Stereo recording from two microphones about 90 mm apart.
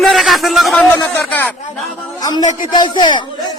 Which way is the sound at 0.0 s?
Centre (ahead or behind).